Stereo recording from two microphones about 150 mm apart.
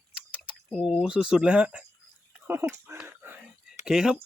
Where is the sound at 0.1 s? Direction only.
5° right (ahead or behind).